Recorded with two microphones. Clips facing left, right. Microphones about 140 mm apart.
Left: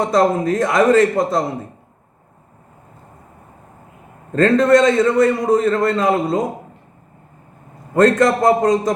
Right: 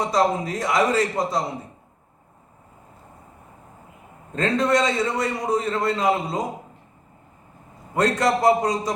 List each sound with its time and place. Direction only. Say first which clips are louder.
0.0 s a man's voice: left 6 dB; 50° left (ahead or behind)
4.3 s a man's voice: left 8 dB; 50° left (ahead or behind)
7.9 s a man's voice: left 7 dB; 50° left (ahead or behind)